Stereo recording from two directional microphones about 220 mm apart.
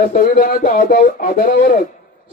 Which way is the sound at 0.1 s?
40° left (ahead or behind).